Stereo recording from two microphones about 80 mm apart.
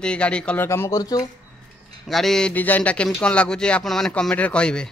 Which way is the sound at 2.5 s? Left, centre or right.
Left.